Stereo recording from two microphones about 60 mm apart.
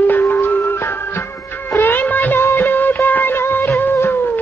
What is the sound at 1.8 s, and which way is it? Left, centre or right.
Music of bollywood, left.